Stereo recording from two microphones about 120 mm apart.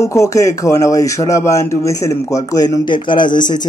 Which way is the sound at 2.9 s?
40° left (ahead or behind).